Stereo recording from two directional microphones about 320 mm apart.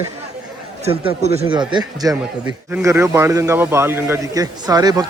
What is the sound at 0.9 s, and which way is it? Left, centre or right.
A man's voice, centre.